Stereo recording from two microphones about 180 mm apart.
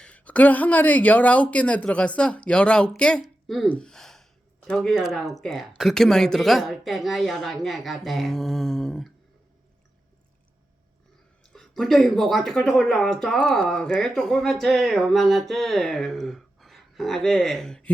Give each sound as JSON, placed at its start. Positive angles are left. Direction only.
{"t": 0.0, "sound": "speech", "side_deg": 5}
{"t": 11.5, "sound": "speech", "side_deg": 0}